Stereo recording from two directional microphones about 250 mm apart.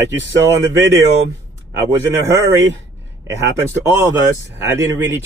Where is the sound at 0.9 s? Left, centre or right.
Right.